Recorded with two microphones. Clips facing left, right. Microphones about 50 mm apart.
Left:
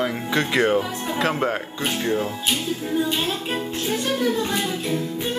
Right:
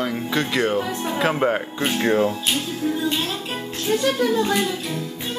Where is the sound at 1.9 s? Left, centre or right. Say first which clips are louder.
Right 4 dB; right.